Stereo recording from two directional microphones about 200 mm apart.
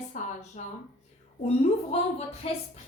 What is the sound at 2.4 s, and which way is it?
Speech, 30° left (ahead or behind).